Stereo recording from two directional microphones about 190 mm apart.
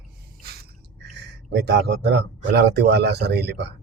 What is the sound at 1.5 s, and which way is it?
Speech, 65° right (ahead or behind).